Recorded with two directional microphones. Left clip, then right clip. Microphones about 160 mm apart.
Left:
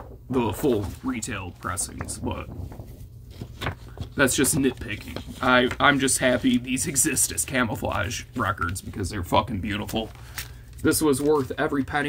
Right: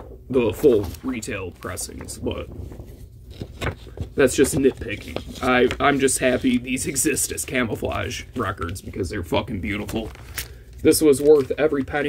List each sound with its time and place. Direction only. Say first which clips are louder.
0.3 s speech: right 7 dB; 5° left (ahead or behind)
4.2 s speech: right 4 dB; 5° left (ahead or behind)
10.4 s a sound: right 3 dB; 80° right
10.8 s speech: right 6 dB; 10° right (ahead or behind)
11.4 s speech: right 5 dB; centre (ahead or behind)